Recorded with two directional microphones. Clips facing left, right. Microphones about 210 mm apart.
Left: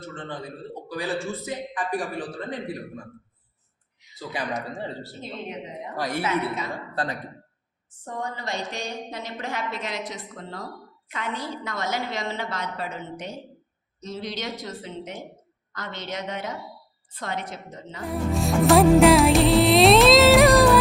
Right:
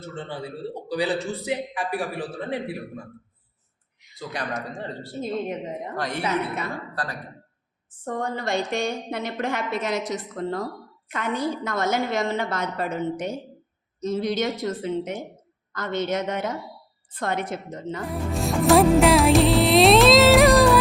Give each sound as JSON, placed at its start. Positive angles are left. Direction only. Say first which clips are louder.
{"t": 0.1, "sound": "a man's voice", "louder": "right 3 dB", "side_deg": -10}
{"t": 4.3, "sound": "speech", "louder": "left 1 dB", "side_deg": 5}
{"t": 6.0, "sound": "speech", "louder": "left 3 dB", "side_deg": 5}
{"t": 6.9, "sound": "speech", "louder": "left 3 dB", "side_deg": 25}
{"t": 8.0, "sound": "a woman's voice", "louder": "right 5 dB", "side_deg": -55}
{"t": 18.0, "sound": "music", "louder": "left 3 dB", "side_deg": 0}